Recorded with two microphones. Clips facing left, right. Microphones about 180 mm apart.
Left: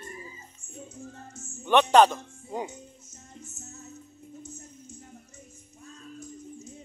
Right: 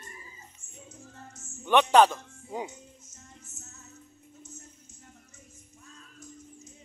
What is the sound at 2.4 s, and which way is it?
Speech, 5° left (ahead or behind).